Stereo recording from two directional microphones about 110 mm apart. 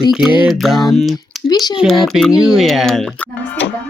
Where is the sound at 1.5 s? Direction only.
40° left (ahead or behind).